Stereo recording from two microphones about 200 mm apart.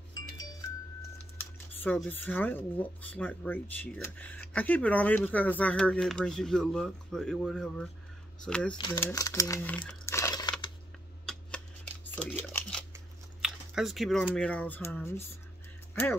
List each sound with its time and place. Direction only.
0.1 s music: 20° left (ahead or behind)
1.8 s speech: 10° left (ahead or behind)
8.7 s speech: 20° left (ahead or behind)
9.8 s crumpling: 15° left (ahead or behind)
11.2 s shuffling cards: 5° left (ahead or behind)
12.9 s speech: 5° right (ahead or behind)